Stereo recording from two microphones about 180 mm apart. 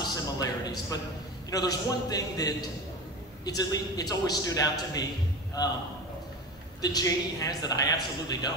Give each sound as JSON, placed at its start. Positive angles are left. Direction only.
{"t": 0.0, "sound": "music", "side_deg": 20}
{"t": 1.5, "sound": "a woman's voice", "side_deg": 20}
{"t": 6.8, "sound": "a woman's voice", "side_deg": 20}